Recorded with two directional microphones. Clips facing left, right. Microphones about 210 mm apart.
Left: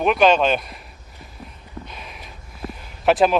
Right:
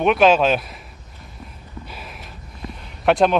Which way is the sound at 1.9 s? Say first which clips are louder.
Right 1 dB; 5° right (ahead or behind).